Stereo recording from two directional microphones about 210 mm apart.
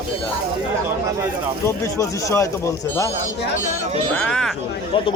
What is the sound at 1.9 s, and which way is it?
Speech, 15° left (ahead or behind).